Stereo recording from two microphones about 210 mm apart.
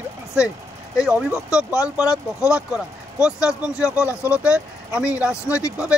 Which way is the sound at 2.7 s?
5° right (ahead or behind).